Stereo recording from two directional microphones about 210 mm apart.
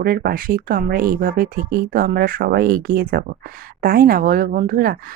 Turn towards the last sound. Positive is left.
turn(degrees=-45)  # may be behind; listen again after turning